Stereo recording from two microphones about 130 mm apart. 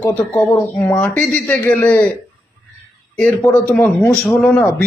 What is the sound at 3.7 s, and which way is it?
Speech, 10° left (ahead or behind).